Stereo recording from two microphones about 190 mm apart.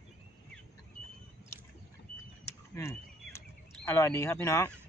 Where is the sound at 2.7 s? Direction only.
15° left (ahead or behind).